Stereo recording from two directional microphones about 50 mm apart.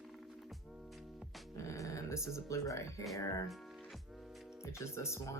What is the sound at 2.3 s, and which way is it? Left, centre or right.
Speech, left.